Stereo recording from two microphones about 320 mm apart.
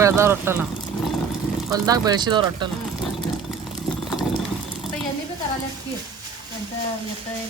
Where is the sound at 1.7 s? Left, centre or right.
Centre.